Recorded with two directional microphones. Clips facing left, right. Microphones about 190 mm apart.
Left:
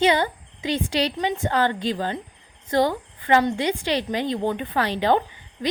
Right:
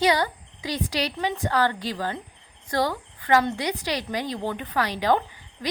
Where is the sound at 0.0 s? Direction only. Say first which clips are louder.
Left 2 dB; 25° left (ahead or behind).